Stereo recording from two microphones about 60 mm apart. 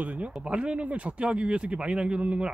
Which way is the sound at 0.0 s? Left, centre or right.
Right.